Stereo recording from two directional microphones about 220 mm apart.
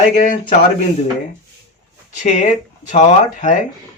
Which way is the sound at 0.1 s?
35° left (ahead or behind).